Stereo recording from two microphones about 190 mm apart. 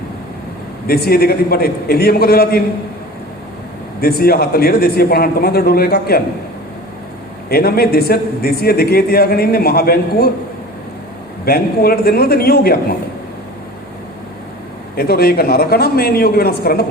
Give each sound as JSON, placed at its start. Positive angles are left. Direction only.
{"t": 0.9, "sound": "a man's voice", "side_deg": 55}
{"t": 4.0, "sound": "a man's voice", "side_deg": 55}
{"t": 7.5, "sound": "a man's voice", "side_deg": 55}
{"t": 11.4, "sound": "a man's voice", "side_deg": 55}
{"t": 14.9, "sound": "a man's voice", "side_deg": 55}